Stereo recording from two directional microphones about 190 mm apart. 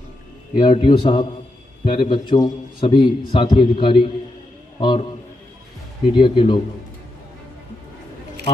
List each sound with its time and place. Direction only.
0.6 s a man's voice: 25° left (ahead or behind)
6.1 s a man's voice: 25° left (ahead or behind)